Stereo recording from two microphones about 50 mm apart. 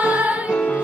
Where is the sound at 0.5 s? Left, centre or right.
Left.